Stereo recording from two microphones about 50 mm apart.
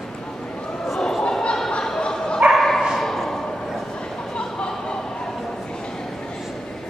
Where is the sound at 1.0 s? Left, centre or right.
Centre.